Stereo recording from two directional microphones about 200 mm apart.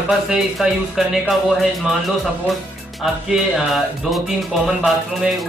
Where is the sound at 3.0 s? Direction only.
Centre (ahead or behind).